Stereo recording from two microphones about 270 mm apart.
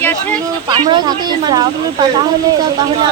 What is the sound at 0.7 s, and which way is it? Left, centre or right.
Speech, centre.